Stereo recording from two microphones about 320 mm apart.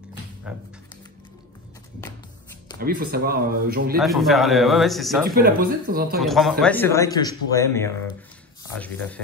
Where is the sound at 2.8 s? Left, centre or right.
Right.